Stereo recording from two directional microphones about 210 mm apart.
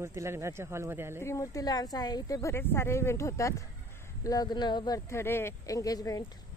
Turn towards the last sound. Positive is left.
turn(degrees=15)  # may be behind; listen again after turning